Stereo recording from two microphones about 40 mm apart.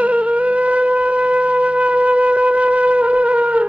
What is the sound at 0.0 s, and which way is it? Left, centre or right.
Wind instrument, right.